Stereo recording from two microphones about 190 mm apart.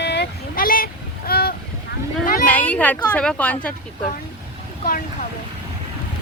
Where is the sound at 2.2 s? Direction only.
45° left (ahead or behind).